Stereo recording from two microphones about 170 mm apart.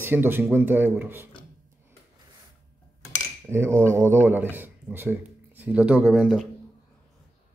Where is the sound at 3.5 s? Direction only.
15° right (ahead or behind).